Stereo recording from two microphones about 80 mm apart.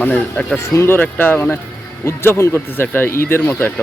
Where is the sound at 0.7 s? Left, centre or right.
Left.